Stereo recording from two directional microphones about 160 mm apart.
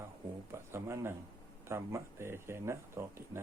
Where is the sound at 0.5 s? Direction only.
15° right (ahead or behind).